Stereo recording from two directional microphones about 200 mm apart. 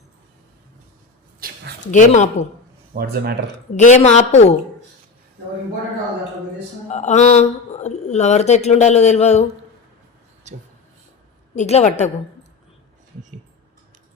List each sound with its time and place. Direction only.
1.4 s a sound: 50° right (ahead or behind)
1.9 s speech: 35° left (ahead or behind)
2.9 s speech: 50° right (ahead or behind)
3.8 s speech: 35° left (ahead or behind)
6.9 s speech: 35° left (ahead or behind)
11.5 s speech: 35° left (ahead or behind)